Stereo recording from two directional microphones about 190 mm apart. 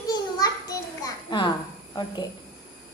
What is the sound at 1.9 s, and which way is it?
Speech, 25° left (ahead or behind).